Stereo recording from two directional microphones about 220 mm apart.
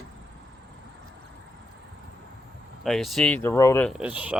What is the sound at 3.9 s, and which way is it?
Speech, 5° right (ahead or behind).